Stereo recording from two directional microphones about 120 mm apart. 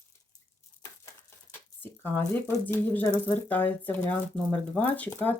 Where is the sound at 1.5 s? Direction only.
20° left (ahead or behind).